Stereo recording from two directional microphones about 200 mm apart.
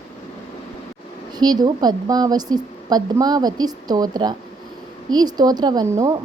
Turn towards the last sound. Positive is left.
turn(degrees=-15)  # may be behind; listen again after turning